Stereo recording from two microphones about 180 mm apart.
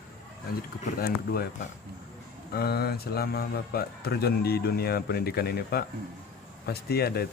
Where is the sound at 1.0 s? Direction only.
55° left (ahead or behind).